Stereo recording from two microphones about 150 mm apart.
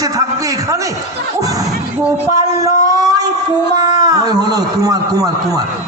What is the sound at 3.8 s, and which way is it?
A man's voice, 25° right (ahead or behind).